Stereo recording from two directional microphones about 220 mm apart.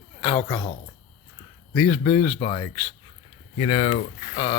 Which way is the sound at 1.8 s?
10° left (ahead or behind).